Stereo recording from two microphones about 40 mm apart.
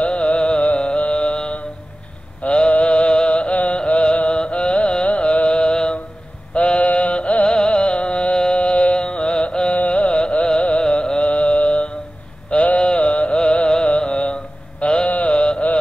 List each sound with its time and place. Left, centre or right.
0.0 s music: left
2.4 s a sound: left
2.7 s music: left
6.5 s mantra: left
7.5 s music: left
9.8 s carnatic music: left
10.8 s music: left
12.6 s a sound: left
13.8 s mantra: left
15.0 s mantra: left
15.3 s music: left